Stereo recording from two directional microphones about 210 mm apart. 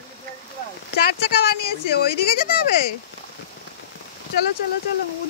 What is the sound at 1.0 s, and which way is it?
Speech, 50° left (ahead or behind).